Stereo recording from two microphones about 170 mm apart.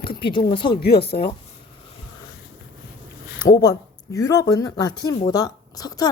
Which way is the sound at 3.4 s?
20° left (ahead or behind).